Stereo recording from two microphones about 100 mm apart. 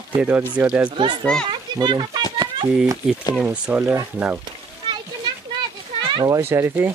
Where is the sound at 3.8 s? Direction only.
30° right (ahead or behind).